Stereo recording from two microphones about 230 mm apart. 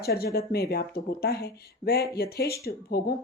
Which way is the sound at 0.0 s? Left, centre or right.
Left.